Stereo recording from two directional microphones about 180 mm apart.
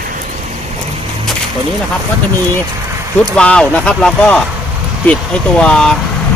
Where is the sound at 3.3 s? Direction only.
5° left (ahead or behind).